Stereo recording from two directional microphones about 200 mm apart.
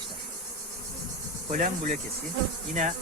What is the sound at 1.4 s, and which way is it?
Speech, 40° right (ahead or behind).